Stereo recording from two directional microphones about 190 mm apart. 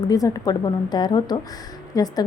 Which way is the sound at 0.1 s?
20° left (ahead or behind).